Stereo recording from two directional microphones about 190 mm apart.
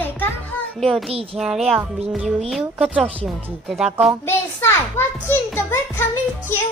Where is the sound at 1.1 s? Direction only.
30° right (ahead or behind).